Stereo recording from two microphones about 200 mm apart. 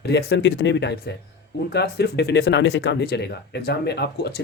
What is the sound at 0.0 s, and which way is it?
Speech, 55° left (ahead or behind).